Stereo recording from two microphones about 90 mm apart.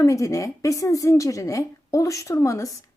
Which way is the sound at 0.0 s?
35° left (ahead or behind).